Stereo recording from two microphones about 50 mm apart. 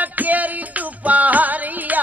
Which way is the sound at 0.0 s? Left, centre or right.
Right.